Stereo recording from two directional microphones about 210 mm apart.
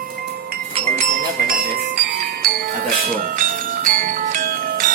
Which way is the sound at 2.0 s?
45° right (ahead or behind).